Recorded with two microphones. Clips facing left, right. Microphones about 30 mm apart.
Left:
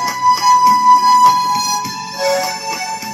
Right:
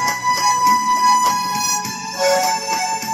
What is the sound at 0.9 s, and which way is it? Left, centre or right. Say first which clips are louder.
Music: left 6 dB; left.